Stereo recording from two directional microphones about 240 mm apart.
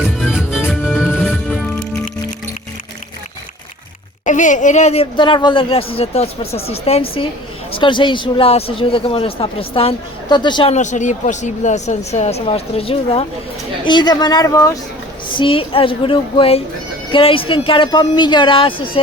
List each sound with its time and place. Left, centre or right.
0.0 s music: centre
4.3 s a woman's voice: left